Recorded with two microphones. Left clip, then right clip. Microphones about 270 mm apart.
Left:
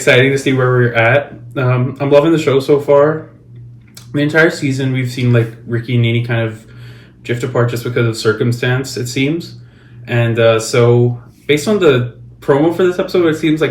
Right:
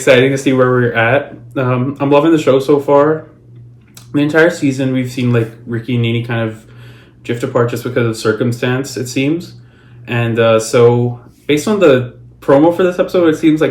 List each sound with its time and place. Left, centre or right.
0.0 s speech: centre
3.9 s speech: centre